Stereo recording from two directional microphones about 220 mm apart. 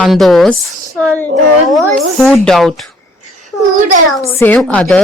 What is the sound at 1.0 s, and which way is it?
Child singing, 5° left (ahead or behind).